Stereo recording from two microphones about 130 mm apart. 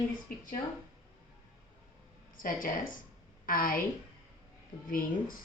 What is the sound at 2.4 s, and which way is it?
Speech, 90° left.